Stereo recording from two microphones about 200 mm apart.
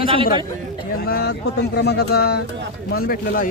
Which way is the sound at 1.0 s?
50° left (ahead or behind).